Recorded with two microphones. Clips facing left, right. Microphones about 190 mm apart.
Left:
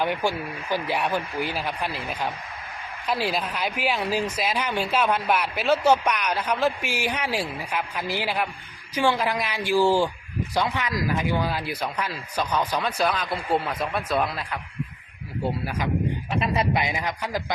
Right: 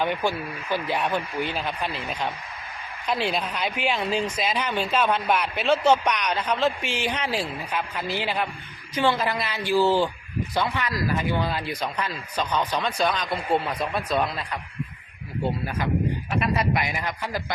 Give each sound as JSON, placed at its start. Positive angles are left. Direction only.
{"t": 0.0, "sound": "speech", "side_deg": 10}
{"t": 16.4, "sound": "speech", "side_deg": 25}